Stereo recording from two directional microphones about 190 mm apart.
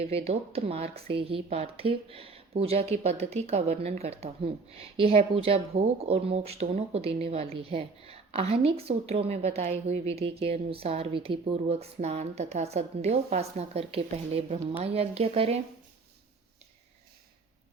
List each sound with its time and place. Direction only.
0.0 s a woman's voice: 35° right (ahead or behind)